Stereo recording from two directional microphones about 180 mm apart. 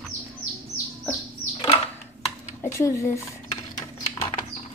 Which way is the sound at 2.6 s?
15° left (ahead or behind).